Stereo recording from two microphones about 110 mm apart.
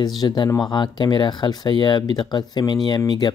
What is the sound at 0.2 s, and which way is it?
Speech, 40° left (ahead or behind).